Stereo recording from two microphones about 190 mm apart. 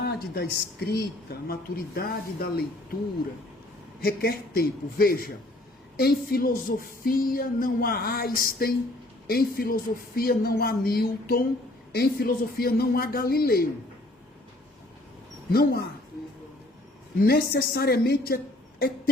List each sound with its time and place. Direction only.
0.0 s speech: 55° left (ahead or behind)
4.0 s speech: 50° left (ahead or behind)
15.5 s speech: 55° left (ahead or behind)
17.2 s speech: 55° left (ahead or behind)